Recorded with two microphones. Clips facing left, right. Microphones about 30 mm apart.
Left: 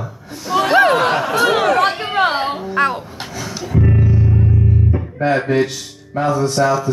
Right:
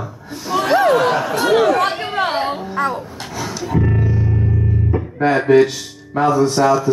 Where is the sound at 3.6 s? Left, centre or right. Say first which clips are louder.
Left 2 dB; centre.